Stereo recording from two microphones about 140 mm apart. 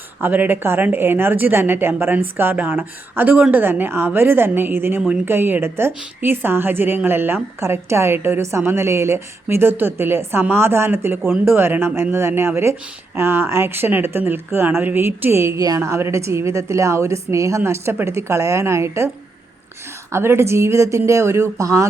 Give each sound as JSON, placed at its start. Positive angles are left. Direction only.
{"t": 0.2, "sound": "a woman's voice", "side_deg": -15}